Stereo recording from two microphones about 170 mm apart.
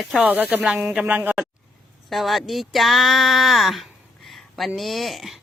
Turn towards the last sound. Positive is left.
turn(degrees=0)  # may be behind; listen again after turning